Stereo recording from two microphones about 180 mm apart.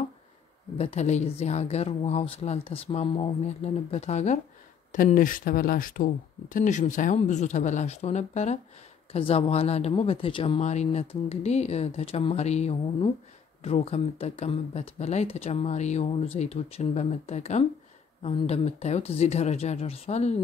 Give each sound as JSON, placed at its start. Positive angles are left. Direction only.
{"t": 0.7, "sound": "speech", "side_deg": 35}